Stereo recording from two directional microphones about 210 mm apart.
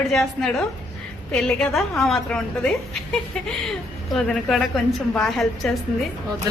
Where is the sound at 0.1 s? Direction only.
Centre (ahead or behind).